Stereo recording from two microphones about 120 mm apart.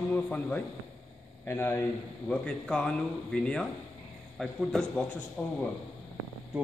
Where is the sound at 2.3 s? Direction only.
10° left (ahead or behind).